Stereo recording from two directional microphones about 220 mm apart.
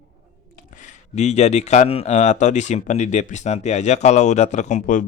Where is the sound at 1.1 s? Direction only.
30° left (ahead or behind).